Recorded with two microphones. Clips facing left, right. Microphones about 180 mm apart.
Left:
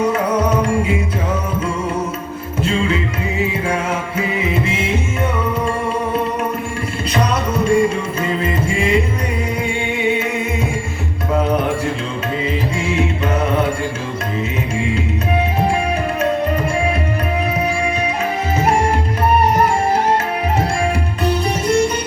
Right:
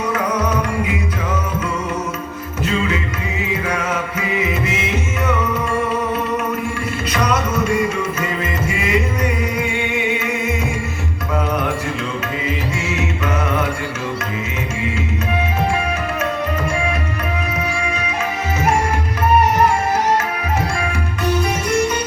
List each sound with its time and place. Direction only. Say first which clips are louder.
7.1 s music: left 1 dB; 30° left (ahead or behind)
17.8 s music: left 4 dB; 30° left (ahead or behind)
21.2 s music: left 1 dB; 30° left (ahead or behind)